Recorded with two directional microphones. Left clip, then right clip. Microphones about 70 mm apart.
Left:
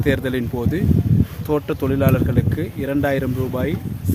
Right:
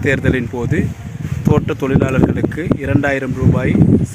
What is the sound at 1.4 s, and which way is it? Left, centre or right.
Speech, right.